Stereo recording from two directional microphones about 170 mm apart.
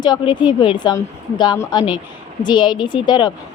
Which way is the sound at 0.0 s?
25° left (ahead or behind).